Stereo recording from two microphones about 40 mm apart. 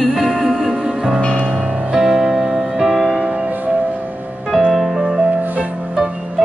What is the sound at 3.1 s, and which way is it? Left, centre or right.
Music, right.